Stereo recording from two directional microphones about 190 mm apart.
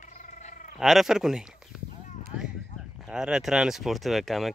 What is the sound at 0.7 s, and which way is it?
Speech, centre (ahead or behind).